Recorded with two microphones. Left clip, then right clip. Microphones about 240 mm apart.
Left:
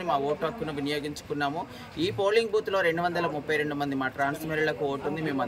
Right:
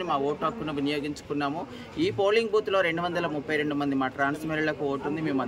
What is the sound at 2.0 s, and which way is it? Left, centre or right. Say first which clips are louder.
Speech: right 1 dB; centre.